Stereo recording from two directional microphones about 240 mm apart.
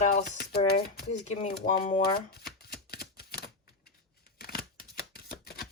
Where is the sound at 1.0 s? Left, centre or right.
Left.